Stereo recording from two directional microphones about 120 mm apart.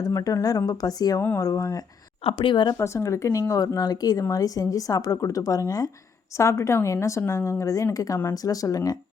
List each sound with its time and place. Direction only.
0.0 s speech: 30° left (ahead or behind)
1.2 s speech: 20° left (ahead or behind)
2.2 s speech: 45° left (ahead or behind)
2.7 s speech: 25° left (ahead or behind)